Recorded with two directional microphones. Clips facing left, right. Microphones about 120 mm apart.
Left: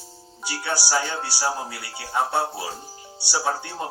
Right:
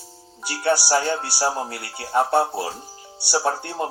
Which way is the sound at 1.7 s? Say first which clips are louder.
Right 5 dB; 55° right (ahead or behind).